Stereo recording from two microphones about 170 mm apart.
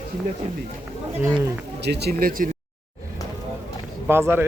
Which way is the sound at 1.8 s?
75° right (ahead or behind).